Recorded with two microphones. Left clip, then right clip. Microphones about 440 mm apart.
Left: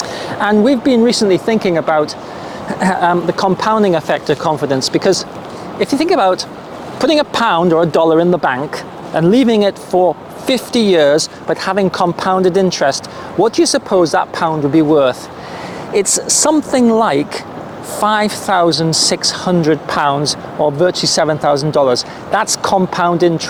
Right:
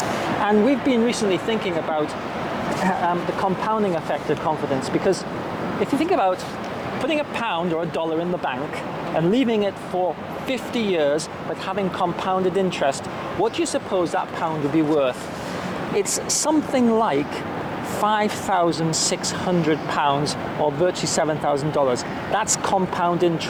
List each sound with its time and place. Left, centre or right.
0.4 s speech: left
2.8 s speech: left
9.1 s speech: left
13.4 s speech: left
16.0 s speech: left